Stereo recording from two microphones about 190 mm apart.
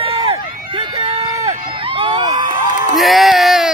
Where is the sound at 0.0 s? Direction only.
30° right (ahead or behind).